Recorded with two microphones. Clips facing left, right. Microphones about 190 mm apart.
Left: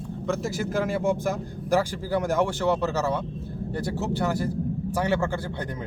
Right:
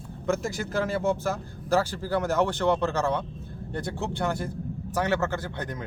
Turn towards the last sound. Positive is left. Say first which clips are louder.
# left 2 dB
turn(degrees=10)  # may be behind; listen again after turning